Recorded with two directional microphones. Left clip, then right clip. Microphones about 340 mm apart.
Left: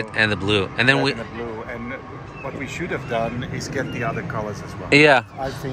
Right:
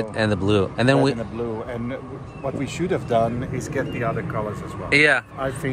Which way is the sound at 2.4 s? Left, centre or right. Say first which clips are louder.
Right 3 dB; right.